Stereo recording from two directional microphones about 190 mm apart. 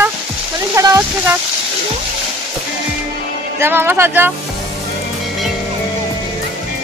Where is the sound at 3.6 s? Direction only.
10° right (ahead or behind).